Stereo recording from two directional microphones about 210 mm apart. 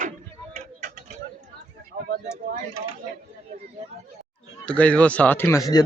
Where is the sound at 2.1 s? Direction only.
35° right (ahead or behind).